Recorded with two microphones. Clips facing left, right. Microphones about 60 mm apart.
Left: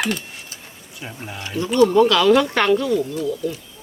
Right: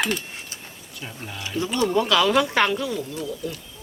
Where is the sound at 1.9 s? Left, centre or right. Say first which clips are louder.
Left 2 dB; centre.